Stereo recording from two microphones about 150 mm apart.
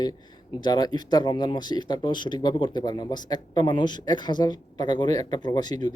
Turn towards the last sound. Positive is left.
turn(degrees=30)  # may be behind; listen again after turning